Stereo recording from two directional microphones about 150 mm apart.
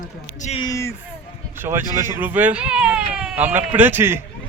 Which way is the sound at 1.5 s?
15° right (ahead or behind).